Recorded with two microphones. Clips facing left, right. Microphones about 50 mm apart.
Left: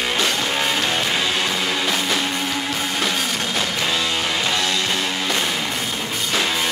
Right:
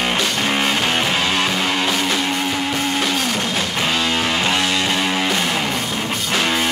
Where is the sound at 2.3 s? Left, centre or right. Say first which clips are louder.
Right 3 dB; centre.